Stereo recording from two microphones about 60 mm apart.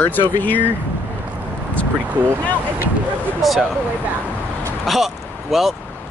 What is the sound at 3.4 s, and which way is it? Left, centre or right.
Speech, centre.